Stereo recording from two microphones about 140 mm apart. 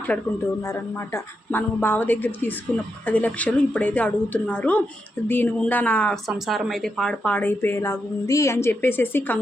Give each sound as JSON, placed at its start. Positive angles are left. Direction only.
{"t": 0.1, "sound": "a woman's voice", "side_deg": 10}
{"t": 0.6, "sound": "a woman's voice", "side_deg": 20}